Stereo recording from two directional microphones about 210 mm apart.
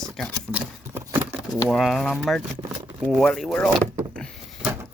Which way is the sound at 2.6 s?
20° right (ahead or behind).